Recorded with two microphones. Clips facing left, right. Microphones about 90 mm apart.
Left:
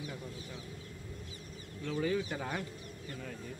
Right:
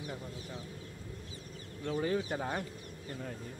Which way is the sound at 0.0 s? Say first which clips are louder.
Right 1 dB; 25° right (ahead or behind).